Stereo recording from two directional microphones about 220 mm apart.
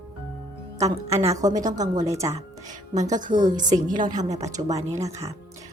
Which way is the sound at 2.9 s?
35° right (ahead or behind).